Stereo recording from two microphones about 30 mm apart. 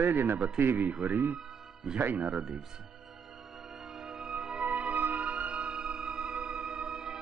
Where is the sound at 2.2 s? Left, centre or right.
Centre.